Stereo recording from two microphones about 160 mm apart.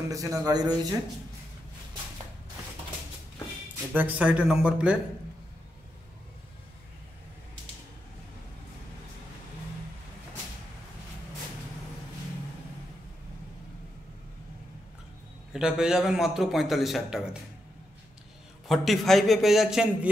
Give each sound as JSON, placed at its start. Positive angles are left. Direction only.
{"t": 0.1, "sound": "speech", "side_deg": -20}
{"t": 3.9, "sound": "speech", "side_deg": -10}
{"t": 15.5, "sound": "a man's voice", "side_deg": -5}
{"t": 18.7, "sound": "a man's voice", "side_deg": 0}